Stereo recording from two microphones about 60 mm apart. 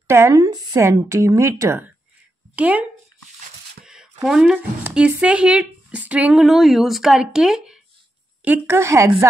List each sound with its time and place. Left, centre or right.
0.0 s speech: right
2.5 s speech: right
3.8 s a sound: centre
4.9 s speech: centre
6.3 s speech: centre
8.6 s a woman's voice: right